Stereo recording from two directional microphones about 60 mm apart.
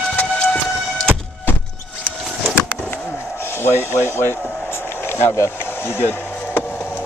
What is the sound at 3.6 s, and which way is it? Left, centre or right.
Speech, left.